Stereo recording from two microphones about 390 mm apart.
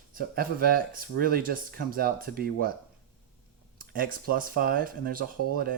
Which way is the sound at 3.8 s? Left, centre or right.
Right.